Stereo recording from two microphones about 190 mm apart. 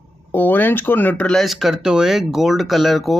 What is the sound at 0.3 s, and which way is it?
Speech, 10° left (ahead or behind).